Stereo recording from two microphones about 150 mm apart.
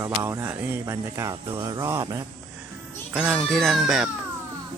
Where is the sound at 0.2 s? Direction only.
20° right (ahead or behind).